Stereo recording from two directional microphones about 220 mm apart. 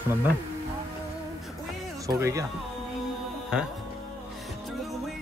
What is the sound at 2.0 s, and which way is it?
Speech, 15° right (ahead or behind).